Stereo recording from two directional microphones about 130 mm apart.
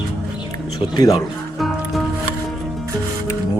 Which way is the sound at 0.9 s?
30° left (ahead or behind).